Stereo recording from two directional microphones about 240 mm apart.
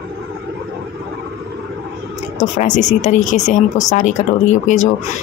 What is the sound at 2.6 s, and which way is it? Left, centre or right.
Speech, left.